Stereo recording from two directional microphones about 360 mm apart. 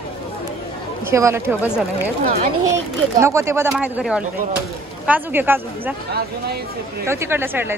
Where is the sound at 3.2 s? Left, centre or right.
Centre.